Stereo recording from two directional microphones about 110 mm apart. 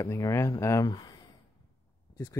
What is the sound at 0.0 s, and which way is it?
Speech, 30° left (ahead or behind).